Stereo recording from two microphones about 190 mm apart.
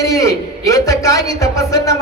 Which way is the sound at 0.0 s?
15° left (ahead or behind).